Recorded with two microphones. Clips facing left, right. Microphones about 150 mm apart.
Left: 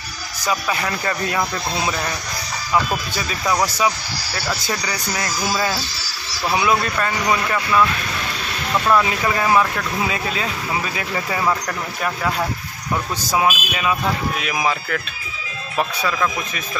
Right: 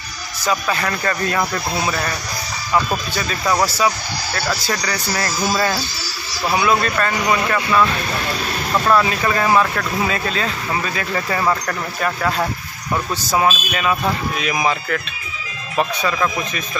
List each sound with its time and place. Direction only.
0.5 s speech: 10° left (ahead or behind)
6.6 s speech: 15° left (ahead or behind)
8.9 s speech: 15° left (ahead or behind)